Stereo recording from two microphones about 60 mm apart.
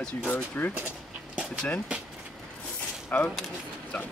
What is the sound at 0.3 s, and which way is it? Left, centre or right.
Speech, left.